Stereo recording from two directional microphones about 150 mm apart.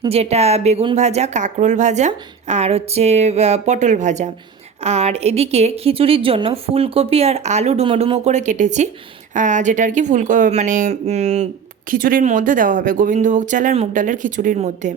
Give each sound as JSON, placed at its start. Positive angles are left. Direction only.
{"t": 0.1, "sound": "a woman's voice", "side_deg": -45}
{"t": 11.9, "sound": "speech", "side_deg": -65}